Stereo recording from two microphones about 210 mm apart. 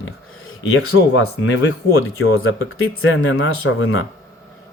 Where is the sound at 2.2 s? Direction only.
75° left (ahead or behind).